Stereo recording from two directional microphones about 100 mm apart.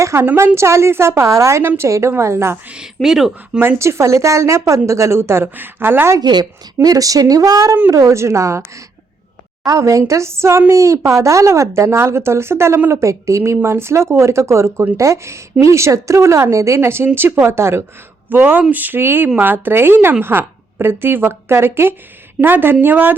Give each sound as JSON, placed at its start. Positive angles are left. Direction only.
{"t": 0.0, "sound": "speech", "side_deg": -25}
{"t": 2.6, "sound": "speech", "side_deg": -5}
{"t": 3.6, "sound": "speech", "side_deg": -25}
{"t": 6.1, "sound": "a woman's voice", "side_deg": -45}